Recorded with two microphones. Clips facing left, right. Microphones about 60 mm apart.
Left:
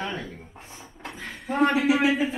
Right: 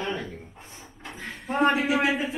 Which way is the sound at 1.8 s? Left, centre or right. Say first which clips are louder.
Left 3 dB; right.